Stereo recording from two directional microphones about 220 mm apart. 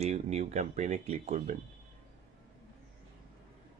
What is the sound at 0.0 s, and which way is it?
Speech, 30° right (ahead or behind).